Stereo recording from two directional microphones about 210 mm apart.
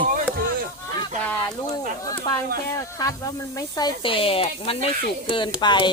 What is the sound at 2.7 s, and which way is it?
Speech, 15° left (ahead or behind).